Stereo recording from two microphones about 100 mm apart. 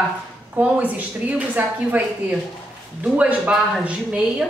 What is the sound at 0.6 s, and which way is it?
A woman's voice, 15° right (ahead or behind).